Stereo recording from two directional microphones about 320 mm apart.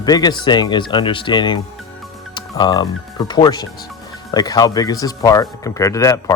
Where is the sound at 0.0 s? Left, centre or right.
Centre.